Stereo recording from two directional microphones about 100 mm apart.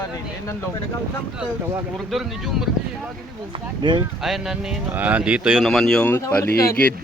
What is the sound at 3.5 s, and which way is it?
Speech, 50° right (ahead or behind).